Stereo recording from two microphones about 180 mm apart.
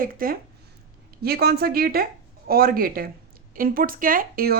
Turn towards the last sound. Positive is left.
turn(degrees=-55)  # may be behind; listen again after turning